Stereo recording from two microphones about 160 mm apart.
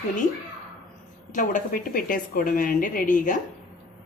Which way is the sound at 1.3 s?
55° left (ahead or behind).